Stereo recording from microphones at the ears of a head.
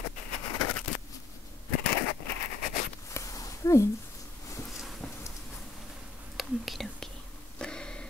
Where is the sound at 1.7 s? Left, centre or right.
Left.